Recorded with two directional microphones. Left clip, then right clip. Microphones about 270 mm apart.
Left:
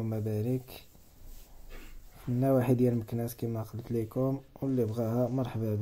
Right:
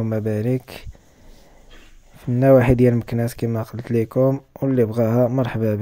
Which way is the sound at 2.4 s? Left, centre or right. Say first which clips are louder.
Right 13 dB; right.